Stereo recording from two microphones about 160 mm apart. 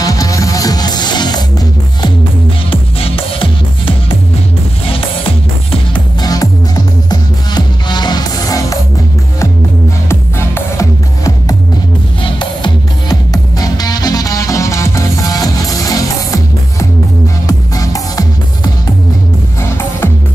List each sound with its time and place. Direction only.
0.0 s music: 20° left (ahead or behind)
6.2 s music: 25° left (ahead or behind)
10.0 s music: 15° left (ahead or behind)
17.5 s music: 20° left (ahead or behind)